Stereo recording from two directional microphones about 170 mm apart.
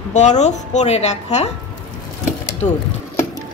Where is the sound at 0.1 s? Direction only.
45° left (ahead or behind).